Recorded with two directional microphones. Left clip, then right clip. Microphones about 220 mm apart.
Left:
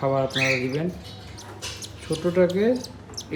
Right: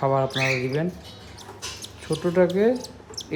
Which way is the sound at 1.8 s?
15° right (ahead or behind).